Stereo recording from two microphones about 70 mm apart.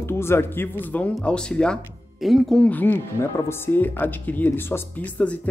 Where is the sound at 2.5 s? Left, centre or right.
Left.